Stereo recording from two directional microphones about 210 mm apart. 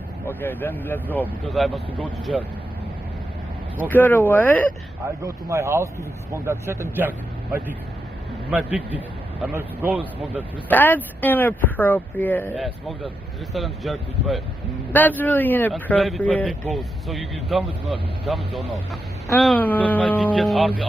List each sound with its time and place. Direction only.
0.3 s speech: 10° left (ahead or behind)
3.7 s speech: 10° left (ahead or behind)
5.2 s speech: 15° right (ahead or behind)
10.7 s speech: 10° left (ahead or behind)